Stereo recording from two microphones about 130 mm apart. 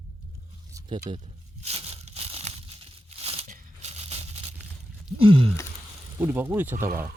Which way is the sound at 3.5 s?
60° right (ahead or behind).